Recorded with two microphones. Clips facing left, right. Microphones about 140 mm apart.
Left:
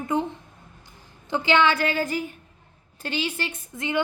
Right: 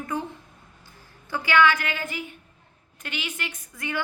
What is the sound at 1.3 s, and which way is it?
A woman's voice, 25° left (ahead or behind).